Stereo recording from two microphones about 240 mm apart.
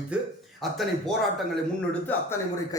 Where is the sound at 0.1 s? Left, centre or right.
Centre.